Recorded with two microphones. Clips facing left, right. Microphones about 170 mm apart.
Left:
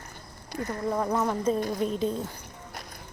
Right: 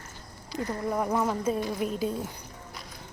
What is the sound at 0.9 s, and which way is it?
Speech, 10° right (ahead or behind).